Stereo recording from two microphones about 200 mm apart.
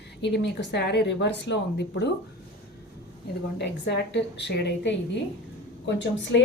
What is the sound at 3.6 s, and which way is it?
A woman's voice, 60° left (ahead or behind).